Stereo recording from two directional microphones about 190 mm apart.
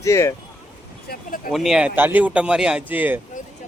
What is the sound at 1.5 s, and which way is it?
A man's voice, centre (ahead or behind).